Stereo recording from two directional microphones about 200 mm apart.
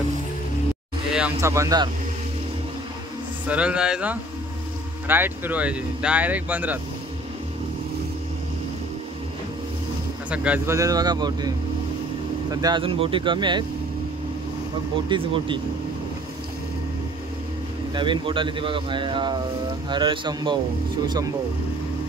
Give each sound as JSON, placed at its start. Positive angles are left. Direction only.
{"t": 1.4, "sound": "speech", "side_deg": -15}
{"t": 3.4, "sound": "speech", "side_deg": -5}
{"t": 10.3, "sound": "speech", "side_deg": -5}
{"t": 15.0, "sound": "speech", "side_deg": -25}
{"t": 17.9, "sound": "speech", "side_deg": -25}